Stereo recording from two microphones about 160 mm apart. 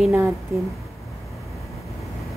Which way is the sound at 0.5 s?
15° right (ahead or behind).